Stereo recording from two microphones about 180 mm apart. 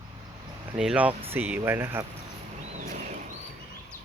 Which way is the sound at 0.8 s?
5° right (ahead or behind).